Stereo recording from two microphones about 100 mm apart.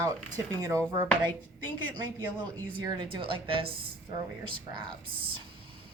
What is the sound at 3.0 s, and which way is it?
Speech, 55° right (ahead or behind).